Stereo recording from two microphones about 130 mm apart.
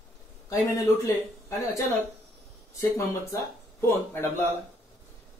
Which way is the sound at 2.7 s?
25° left (ahead or behind).